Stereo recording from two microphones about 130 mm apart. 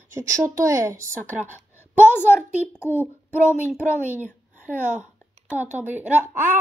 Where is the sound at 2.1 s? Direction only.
15° left (ahead or behind).